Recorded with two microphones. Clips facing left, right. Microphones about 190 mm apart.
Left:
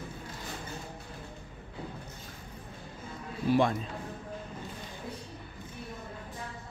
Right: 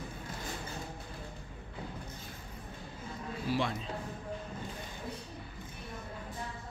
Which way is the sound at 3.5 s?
50° left (ahead or behind).